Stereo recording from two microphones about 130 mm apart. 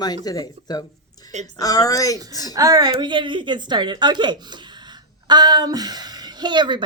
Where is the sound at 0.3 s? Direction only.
30° left (ahead or behind).